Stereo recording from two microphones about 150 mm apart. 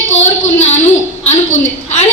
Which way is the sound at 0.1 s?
50° left (ahead or behind).